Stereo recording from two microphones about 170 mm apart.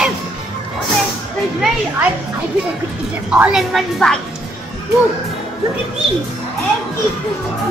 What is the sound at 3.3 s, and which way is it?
Speech, 5° right (ahead or behind).